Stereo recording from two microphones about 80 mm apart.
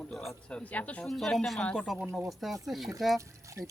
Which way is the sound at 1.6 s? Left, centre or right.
Centre.